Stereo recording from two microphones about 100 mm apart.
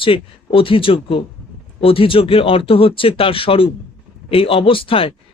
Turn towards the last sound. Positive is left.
turn(degrees=65)  # may be behind; listen again after turning